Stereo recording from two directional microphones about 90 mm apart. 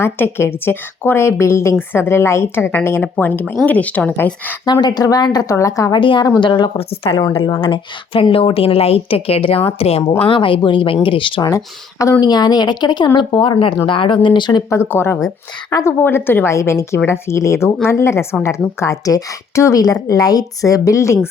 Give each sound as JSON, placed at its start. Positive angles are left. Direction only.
{"t": 0.0, "sound": "a woman's voice", "side_deg": 25}
{"t": 4.6, "sound": "a woman's voice", "side_deg": 50}
{"t": 5.9, "sound": "speech", "side_deg": 65}
{"t": 6.7, "sound": "a woman's voice", "side_deg": 90}
{"t": 7.6, "sound": "a woman's voice", "side_deg": 80}
{"t": 10.2, "sound": "speech", "side_deg": 75}
{"t": 11.4, "sound": "a woman's voice", "side_deg": 35}
{"t": 12.2, "sound": "a woman's voice", "side_deg": 50}
{"t": 13.8, "sound": "speech", "side_deg": 70}
{"t": 14.7, "sound": "a woman's voice", "side_deg": 30}